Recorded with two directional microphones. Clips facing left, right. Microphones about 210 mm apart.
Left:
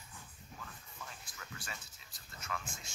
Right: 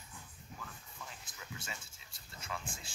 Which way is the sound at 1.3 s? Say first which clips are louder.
Right 1 dB; 20° right (ahead or behind).